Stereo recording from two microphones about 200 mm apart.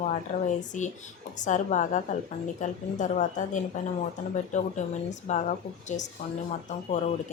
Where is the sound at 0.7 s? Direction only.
40° left (ahead or behind).